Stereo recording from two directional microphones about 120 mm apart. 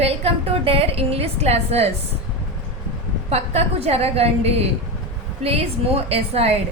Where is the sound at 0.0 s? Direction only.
55° right (ahead or behind).